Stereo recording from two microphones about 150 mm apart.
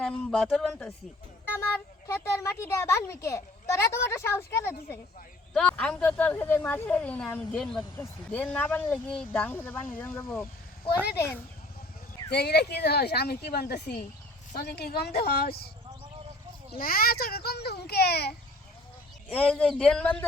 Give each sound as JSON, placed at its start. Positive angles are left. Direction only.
{"t": 0.0, "sound": "speech", "side_deg": 5}
{"t": 1.5, "sound": "speech", "side_deg": 15}
{"t": 5.5, "sound": "speech", "side_deg": 5}
{"t": 12.3, "sound": "speech", "side_deg": 90}
{"t": 16.7, "sound": "speech", "side_deg": 75}
{"t": 19.3, "sound": "speech", "side_deg": 10}